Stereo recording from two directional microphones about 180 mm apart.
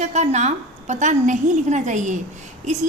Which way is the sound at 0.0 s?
40° right (ahead or behind).